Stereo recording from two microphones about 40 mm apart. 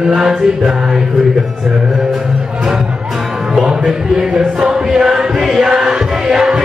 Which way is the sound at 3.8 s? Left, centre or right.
Centre.